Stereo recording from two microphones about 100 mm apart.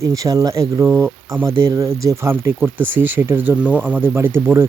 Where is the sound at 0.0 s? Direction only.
35° right (ahead or behind).